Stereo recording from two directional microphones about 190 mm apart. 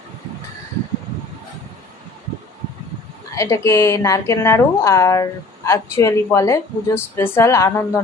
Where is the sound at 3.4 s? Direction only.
15° left (ahead or behind).